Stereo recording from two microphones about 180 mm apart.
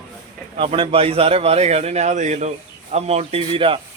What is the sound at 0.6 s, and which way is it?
A man's voice, 30° right (ahead or behind).